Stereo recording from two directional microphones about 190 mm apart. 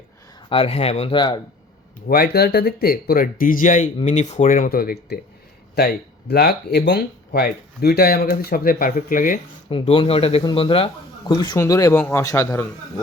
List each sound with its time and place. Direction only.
0.5 s speech: 30° left (ahead or behind)
2.0 s speech: 55° left (ahead or behind)
9.6 s a man's voice: 30° left (ahead or behind)